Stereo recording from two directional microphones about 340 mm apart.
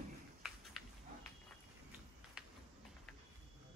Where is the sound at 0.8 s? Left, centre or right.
Centre.